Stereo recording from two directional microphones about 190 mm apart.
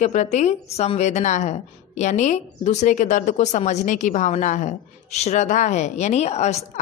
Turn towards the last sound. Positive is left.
turn(degrees=35)  # may be behind; listen again after turning